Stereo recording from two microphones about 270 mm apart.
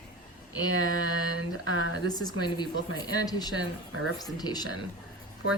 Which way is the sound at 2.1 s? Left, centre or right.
Centre.